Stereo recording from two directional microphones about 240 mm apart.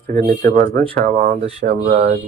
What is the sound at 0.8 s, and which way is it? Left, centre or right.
Speech, right.